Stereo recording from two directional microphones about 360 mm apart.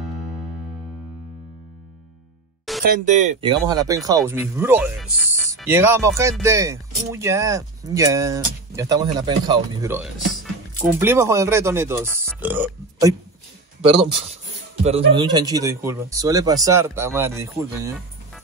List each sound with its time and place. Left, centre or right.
2.8 s speech: right; by 13.1 s centre
13.7 s speech: centre